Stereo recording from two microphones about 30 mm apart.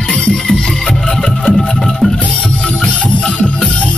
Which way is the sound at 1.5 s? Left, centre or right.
Centre.